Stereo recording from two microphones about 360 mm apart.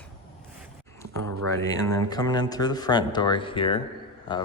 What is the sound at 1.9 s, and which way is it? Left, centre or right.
Speech, centre.